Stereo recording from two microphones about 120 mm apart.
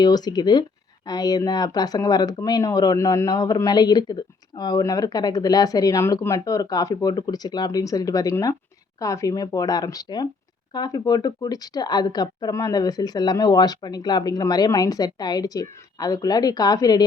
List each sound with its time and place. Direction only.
0.0 s speech: 35° left (ahead or behind)